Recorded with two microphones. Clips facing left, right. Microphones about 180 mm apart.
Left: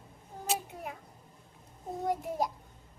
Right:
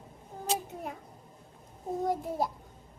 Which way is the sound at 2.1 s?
15° left (ahead or behind).